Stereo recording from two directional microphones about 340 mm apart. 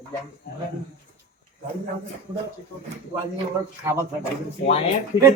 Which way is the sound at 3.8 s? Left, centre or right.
Centre.